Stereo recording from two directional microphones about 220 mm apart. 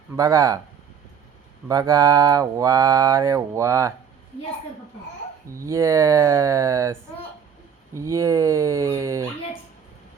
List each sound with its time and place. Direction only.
0.2 s mantra: 15° right (ahead or behind)
1.6 s mantra: 15° right (ahead or behind)
5.5 s mantra: 15° right (ahead or behind)